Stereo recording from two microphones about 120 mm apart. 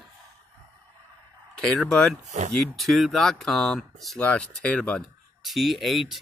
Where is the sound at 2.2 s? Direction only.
80° right.